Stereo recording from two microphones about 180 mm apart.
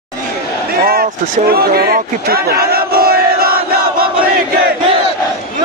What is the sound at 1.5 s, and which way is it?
Crowd, 60° right (ahead or behind).